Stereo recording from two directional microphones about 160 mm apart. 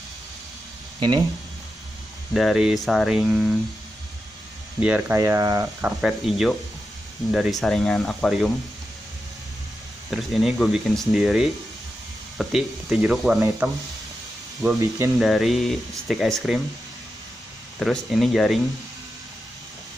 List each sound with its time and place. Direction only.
0.9 s speech: 30° right (ahead or behind)
2.3 s speech: centre (ahead or behind)
4.7 s speech: 10° right (ahead or behind)
5.8 s speech: 5° right (ahead or behind)
10.1 s speech: centre (ahead or behind)
13.6 s speech: 15° right (ahead or behind)
15.1 s speech: centre (ahead or behind)
17.7 s speech: centre (ahead or behind)